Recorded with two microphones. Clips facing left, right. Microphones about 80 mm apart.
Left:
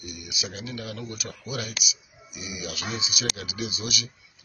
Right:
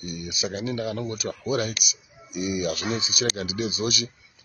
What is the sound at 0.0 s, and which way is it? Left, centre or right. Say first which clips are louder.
Speech: right 6 dB; right.